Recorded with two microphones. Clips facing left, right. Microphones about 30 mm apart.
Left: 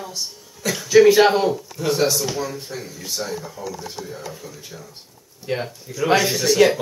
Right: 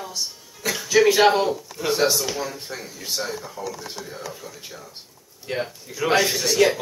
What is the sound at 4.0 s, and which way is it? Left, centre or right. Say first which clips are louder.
Speech: left 3 dB; right.